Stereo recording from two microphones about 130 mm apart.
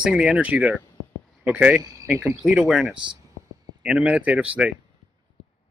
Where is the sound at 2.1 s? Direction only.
15° right (ahead or behind).